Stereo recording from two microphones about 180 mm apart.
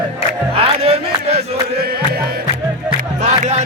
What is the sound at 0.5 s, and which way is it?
Music, 35° right (ahead or behind).